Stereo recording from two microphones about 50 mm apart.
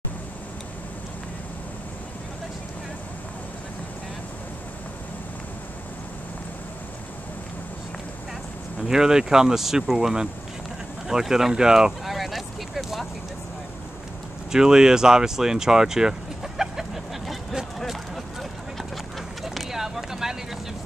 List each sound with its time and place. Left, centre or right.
8.8 s speech: centre
12.0 s vehicle: centre
14.5 s a sound: centre